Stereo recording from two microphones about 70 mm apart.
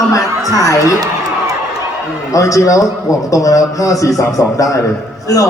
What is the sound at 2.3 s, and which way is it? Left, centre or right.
A man's voice, left.